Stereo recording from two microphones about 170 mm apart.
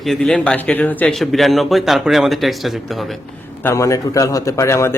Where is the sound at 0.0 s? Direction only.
Centre (ahead or behind).